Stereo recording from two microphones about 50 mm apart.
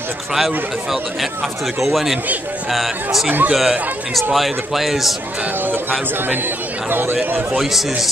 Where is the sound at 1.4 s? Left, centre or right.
Centre.